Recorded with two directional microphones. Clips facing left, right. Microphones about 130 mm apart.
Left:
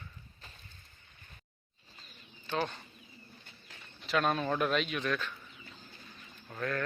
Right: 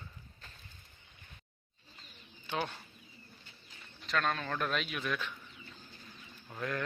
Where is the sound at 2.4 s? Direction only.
10° right (ahead or behind).